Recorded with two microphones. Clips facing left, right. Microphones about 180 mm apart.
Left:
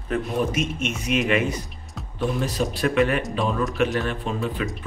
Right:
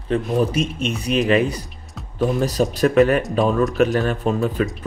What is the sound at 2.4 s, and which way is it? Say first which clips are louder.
Speech: right 7 dB; 40° right (ahead or behind).